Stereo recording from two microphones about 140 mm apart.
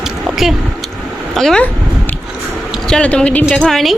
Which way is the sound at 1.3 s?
5° left (ahead or behind).